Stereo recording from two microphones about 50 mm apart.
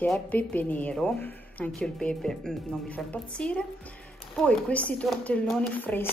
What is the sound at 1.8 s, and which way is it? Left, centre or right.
Speech, centre.